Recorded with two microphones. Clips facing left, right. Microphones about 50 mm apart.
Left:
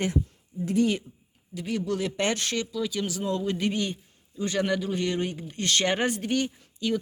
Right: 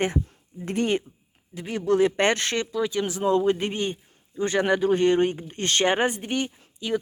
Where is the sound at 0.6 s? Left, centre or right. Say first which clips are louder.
Even; right.